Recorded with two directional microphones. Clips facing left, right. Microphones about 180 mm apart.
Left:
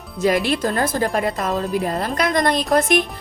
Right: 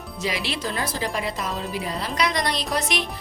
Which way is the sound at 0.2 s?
50° left (ahead or behind).